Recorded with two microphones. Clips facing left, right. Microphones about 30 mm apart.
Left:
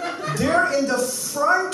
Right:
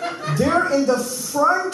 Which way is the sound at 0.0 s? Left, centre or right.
Centre.